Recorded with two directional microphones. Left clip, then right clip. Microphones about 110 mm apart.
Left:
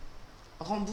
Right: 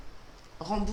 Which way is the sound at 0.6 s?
5° left (ahead or behind).